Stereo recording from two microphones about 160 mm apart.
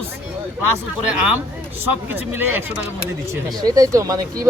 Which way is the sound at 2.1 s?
10° right (ahead or behind).